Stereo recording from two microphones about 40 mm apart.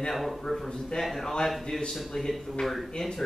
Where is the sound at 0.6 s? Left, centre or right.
Centre.